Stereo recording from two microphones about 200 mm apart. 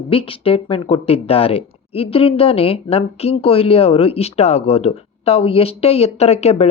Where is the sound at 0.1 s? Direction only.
25° left (ahead or behind).